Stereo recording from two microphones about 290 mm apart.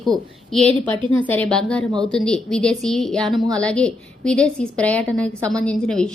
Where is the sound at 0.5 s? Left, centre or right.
Centre.